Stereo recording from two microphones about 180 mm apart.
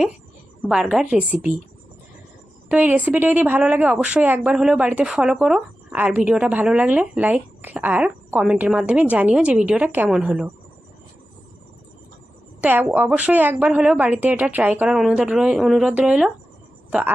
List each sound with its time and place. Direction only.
0.7 s a woman's voice: 5° right (ahead or behind)
2.6 s a woman's voice: 10° right (ahead or behind)
12.6 s a woman's voice: 10° right (ahead or behind)